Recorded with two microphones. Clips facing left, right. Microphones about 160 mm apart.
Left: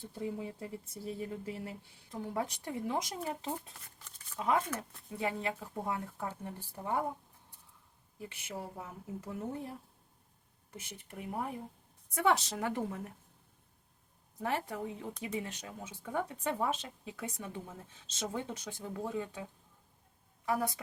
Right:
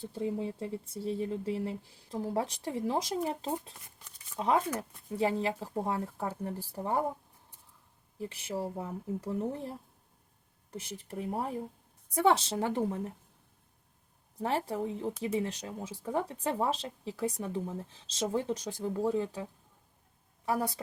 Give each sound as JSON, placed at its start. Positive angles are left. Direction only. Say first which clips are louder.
{"t": 0.0, "sound": "speech", "louder": "right 5 dB", "side_deg": -30}
{"t": 8.2, "sound": "speech", "louder": "right 7 dB", "side_deg": -30}
{"t": 14.3, "sound": "a woman's voice", "louder": "right 4 dB", "side_deg": -30}